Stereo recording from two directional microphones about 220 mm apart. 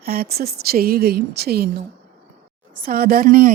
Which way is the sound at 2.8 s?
40° right (ahead or behind).